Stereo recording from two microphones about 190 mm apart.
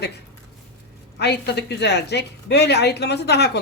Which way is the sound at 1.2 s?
60° left (ahead or behind).